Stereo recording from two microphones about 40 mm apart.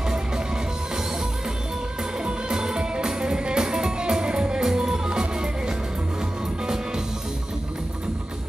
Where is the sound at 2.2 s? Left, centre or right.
Centre.